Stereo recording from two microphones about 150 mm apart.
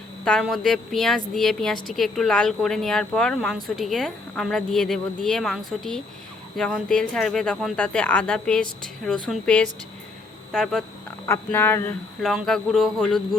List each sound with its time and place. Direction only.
0.3 s a woman's voice: centre (ahead or behind)
11.3 s speech: 15° left (ahead or behind)
12.2 s a woman's voice: centre (ahead or behind)